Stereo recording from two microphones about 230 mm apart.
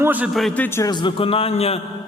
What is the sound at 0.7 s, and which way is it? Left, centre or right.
A man's voice, centre.